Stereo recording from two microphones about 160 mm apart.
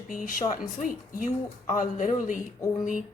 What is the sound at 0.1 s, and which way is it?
A woman's voice, 60° left (ahead or behind).